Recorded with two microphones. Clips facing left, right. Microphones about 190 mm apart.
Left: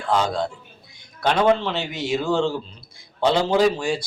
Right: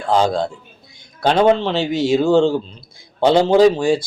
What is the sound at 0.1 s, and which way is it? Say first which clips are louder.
Speech: right 5 dB; 35° right (ahead or behind).